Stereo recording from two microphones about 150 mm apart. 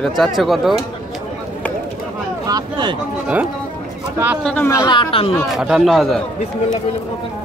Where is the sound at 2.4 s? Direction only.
25° right (ahead or behind).